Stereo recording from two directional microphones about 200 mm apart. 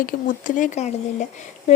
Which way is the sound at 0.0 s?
40° left (ahead or behind).